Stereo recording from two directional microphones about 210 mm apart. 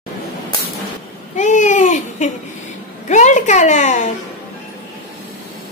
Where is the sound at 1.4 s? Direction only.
35° left (ahead or behind).